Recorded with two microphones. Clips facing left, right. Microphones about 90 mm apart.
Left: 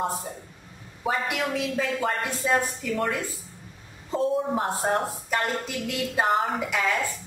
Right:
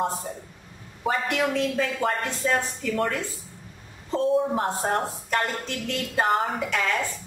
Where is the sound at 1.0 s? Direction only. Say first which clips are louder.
Right 2 dB; 5° left (ahead or behind).